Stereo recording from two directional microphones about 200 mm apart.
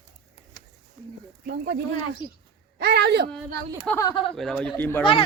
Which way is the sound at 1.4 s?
55° right (ahead or behind).